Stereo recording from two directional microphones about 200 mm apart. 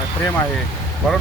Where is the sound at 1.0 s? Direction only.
5° left (ahead or behind).